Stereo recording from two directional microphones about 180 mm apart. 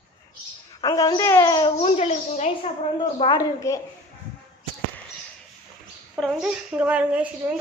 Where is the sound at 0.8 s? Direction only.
20° left (ahead or behind).